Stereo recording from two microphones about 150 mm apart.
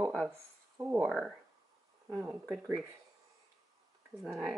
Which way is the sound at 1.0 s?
Centre (ahead or behind).